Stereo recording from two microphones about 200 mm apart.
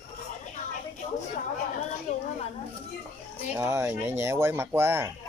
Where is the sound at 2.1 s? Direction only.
35° left (ahead or behind).